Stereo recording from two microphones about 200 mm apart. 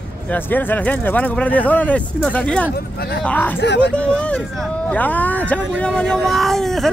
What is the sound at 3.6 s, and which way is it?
Speech, 60° left (ahead or behind).